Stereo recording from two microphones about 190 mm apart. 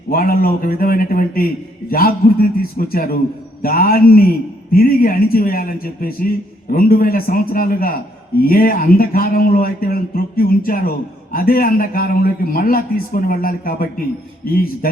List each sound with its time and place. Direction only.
0.1 s a man's voice: 50° left (ahead or behind)